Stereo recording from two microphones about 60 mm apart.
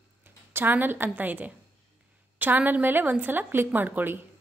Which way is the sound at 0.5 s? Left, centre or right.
Right.